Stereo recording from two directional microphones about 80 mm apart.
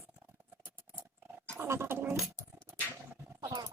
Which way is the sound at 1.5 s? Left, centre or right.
Right.